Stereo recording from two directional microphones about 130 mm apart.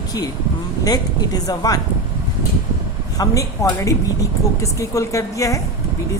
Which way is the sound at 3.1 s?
25° left (ahead or behind).